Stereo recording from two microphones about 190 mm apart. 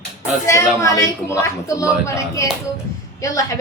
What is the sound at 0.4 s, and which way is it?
Speech, 15° left (ahead or behind).